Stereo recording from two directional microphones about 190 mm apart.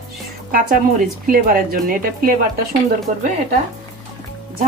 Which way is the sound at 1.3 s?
50° right (ahead or behind).